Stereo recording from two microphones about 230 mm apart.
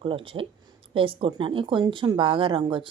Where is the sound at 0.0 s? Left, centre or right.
Right.